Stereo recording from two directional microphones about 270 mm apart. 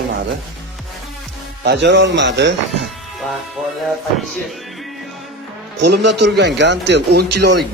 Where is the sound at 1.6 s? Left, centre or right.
Right.